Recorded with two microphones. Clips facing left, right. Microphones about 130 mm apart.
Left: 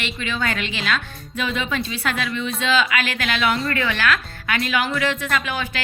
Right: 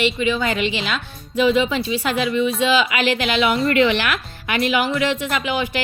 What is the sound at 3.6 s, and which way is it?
A woman's voice, 20° right (ahead or behind).